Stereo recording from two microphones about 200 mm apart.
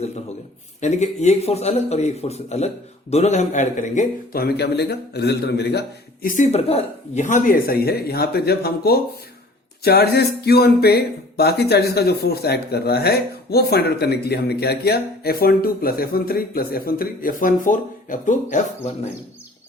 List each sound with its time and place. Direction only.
0.8 s speech: 35° left (ahead or behind); by 5.8 s 55° left (ahead or behind)
6.2 s speech: 40° left (ahead or behind)